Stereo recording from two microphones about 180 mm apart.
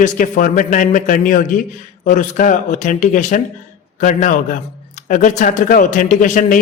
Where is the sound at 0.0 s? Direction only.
45° left (ahead or behind).